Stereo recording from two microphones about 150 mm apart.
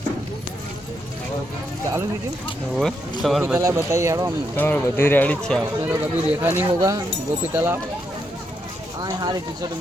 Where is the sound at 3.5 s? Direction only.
20° right (ahead or behind).